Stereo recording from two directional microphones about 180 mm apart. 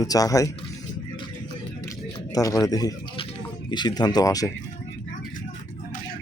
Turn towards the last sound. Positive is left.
turn(degrees=20)  # may be behind; listen again after turning